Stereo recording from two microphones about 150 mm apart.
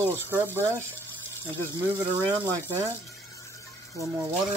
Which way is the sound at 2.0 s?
30° right (ahead or behind).